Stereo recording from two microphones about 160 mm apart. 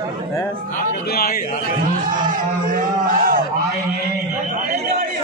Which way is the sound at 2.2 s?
60° right (ahead or behind).